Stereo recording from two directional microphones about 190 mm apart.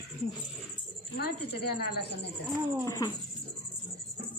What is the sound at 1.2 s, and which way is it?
Speech, 55° left (ahead or behind).